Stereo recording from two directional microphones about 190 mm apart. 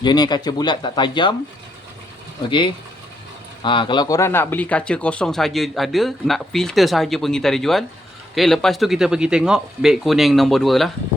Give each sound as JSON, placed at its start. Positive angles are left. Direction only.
{"t": 0.0, "sound": "speech", "side_deg": 20}
{"t": 2.5, "sound": "speech", "side_deg": 25}